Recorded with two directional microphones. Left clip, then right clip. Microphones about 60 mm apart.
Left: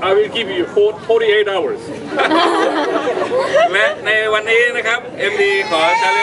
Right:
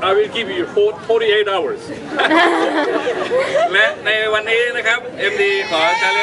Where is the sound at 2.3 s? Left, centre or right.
Right.